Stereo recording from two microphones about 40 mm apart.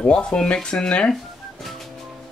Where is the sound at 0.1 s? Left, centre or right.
Left.